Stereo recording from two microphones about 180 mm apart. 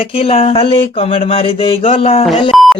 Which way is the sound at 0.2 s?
30° left (ahead or behind).